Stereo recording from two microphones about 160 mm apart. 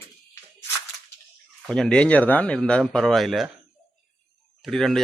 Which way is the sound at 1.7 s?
5° left (ahead or behind).